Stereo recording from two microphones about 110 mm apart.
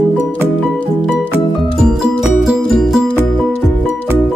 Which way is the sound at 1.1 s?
5° right (ahead or behind).